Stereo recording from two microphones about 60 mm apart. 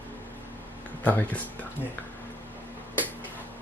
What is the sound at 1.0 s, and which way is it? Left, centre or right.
Speech, left.